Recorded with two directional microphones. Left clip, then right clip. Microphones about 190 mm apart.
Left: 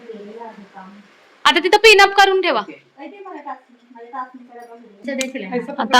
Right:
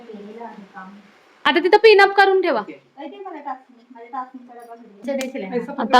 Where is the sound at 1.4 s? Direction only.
20° right (ahead or behind).